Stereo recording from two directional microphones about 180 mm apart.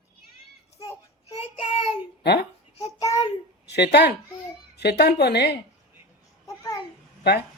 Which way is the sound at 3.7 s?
70° left (ahead or behind).